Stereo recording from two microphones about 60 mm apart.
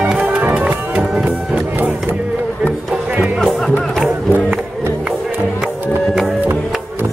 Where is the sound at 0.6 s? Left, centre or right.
Centre.